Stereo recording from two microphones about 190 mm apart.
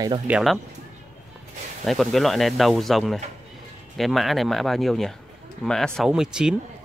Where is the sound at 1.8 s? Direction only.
Centre (ahead or behind).